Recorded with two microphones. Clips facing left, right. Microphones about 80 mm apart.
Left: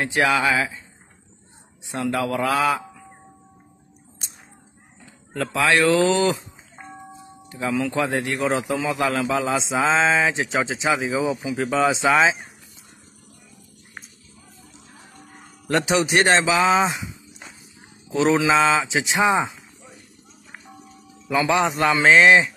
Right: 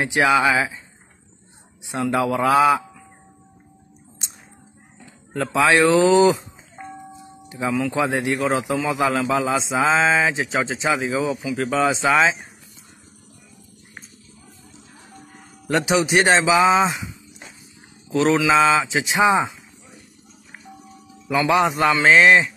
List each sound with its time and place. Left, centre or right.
0.0 s speech: centre
2.2 s speech: centre
5.4 s speech: centre
7.4 s speech: centre
7.7 s speech: centre
8.0 s speech: centre
8.4 s speech: centre
8.9 s speech: centre
9.2 s speech: centre
15.6 s speech: centre
18.1 s mantra: centre
18.5 s speech: centre
21.5 s speech: centre